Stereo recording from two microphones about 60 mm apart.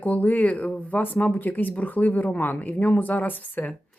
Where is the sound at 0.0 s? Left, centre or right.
Left.